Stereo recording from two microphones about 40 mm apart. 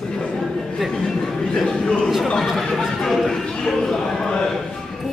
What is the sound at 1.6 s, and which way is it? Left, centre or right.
A man's voice, centre.